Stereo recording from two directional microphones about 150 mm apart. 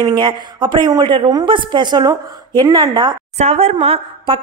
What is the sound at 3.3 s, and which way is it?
A woman's voice, 45° right (ahead or behind).